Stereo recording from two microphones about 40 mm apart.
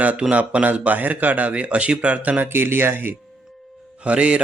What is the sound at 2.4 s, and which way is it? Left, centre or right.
Speech, right.